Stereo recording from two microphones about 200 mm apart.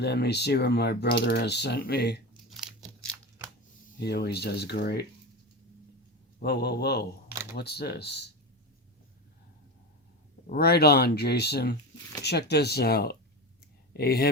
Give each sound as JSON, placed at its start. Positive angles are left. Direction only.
{"t": 0.0, "sound": "speech", "side_deg": 55}
{"t": 2.5, "sound": "scissors", "side_deg": 0}
{"t": 4.0, "sound": "speech", "side_deg": 55}
{"t": 6.4, "sound": "speech", "side_deg": 55}
{"t": 10.4, "sound": "speech", "side_deg": 45}